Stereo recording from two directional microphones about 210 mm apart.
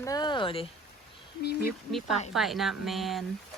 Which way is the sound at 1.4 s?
50° left (ahead or behind).